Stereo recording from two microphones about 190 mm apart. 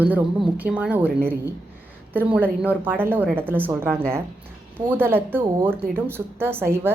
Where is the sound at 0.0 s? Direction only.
10° right (ahead or behind).